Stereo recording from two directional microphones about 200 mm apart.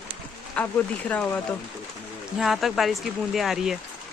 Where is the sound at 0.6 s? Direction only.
10° left (ahead or behind).